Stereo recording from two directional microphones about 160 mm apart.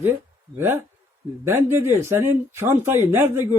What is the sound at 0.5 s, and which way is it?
A man's voice, 15° right (ahead or behind).